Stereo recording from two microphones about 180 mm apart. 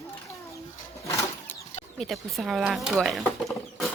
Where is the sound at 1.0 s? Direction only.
15° left (ahead or behind).